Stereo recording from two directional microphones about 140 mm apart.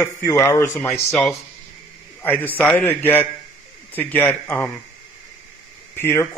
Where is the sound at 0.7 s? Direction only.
5° left (ahead or behind).